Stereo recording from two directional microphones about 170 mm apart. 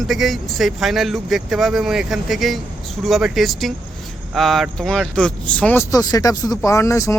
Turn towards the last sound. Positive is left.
turn(degrees=15)  # may be behind; listen again after turning